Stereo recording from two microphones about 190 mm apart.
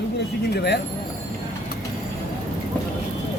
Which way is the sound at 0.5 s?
60° left (ahead or behind).